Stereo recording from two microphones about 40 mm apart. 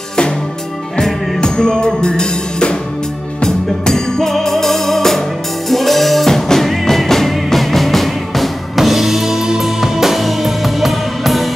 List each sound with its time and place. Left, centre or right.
0.9 s music: centre